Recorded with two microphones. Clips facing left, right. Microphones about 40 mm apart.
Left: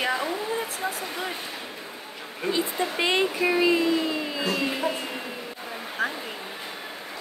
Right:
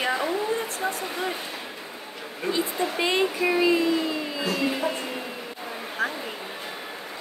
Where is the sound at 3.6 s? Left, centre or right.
Left.